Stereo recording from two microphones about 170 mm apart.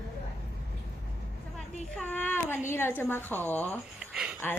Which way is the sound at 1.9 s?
10° left (ahead or behind).